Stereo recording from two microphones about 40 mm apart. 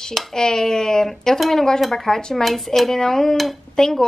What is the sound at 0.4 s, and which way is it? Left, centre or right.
Speech, centre.